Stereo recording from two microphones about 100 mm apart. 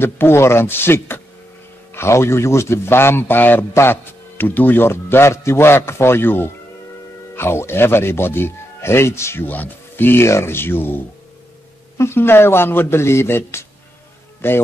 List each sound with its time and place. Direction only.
0.0 s a man's voice: 25° left (ahead or behind)
12.0 s a man's voice: 25° left (ahead or behind)